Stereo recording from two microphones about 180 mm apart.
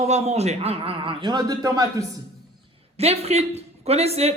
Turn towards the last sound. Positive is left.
turn(degrees=-35)  # may be behind; listen again after turning